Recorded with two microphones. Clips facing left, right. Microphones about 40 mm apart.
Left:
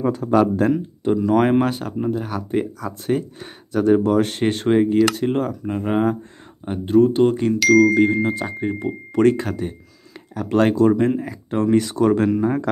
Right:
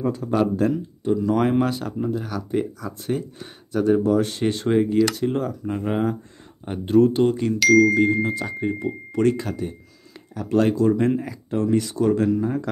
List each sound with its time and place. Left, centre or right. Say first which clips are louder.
0.0 s speech: left 4 dB; left
0.7 s speech: left 3 dB; left
1.2 s speech: left 4 dB; left
2.8 s speech: left 4 dB; left
3.7 s speech: left 3 dB; left
4.6 s speech: left 3 dB; left
5.0 s speech: left 3 dB; left
5.7 s speech: left 4 dB; centre
7.5 s speech: left 1 dB; centre
7.9 s speech: left 2 dB; left
9.1 s speech: left 5 dB; left
11.0 s speech: left 2 dB; centre
11.5 s speech: left 3 dB; left